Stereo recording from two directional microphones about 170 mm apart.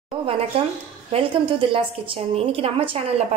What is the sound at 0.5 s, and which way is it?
A woman's voice, 35° right (ahead or behind).